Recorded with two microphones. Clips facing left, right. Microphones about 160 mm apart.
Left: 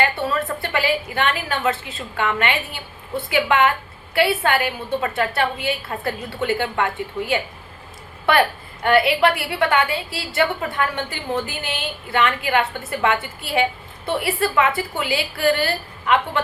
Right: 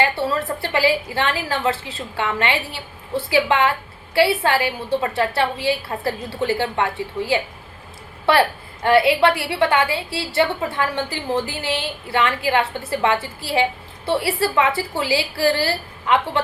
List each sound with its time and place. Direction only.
0.0 s a woman's voice: 30° right (ahead or behind)